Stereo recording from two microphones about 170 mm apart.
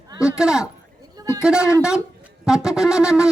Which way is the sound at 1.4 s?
5° right (ahead or behind).